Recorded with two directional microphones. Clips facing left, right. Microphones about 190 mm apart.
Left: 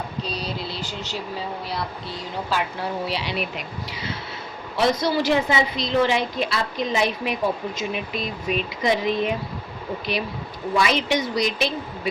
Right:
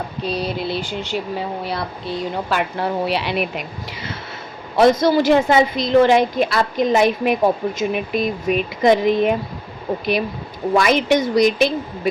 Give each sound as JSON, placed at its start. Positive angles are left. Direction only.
{"t": 0.3, "sound": "a woman's voice", "side_deg": -60}
{"t": 10.8, "sound": "a woman's voice", "side_deg": -50}